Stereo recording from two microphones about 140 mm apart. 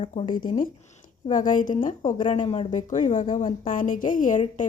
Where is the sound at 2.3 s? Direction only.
50° left (ahead or behind).